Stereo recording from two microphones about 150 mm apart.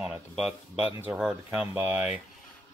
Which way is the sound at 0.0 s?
5° right (ahead or behind).